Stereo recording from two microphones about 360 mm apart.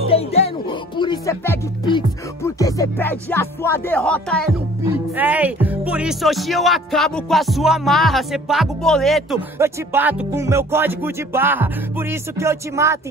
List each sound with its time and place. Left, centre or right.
0.1 s speech: centre